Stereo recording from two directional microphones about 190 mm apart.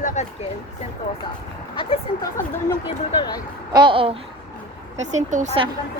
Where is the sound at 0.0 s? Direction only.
40° left (ahead or behind).